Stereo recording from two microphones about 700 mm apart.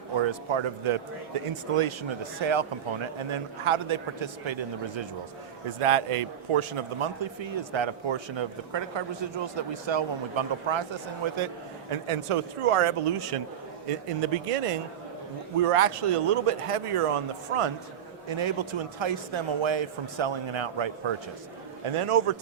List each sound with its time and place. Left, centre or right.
0.2 s a man's voice: right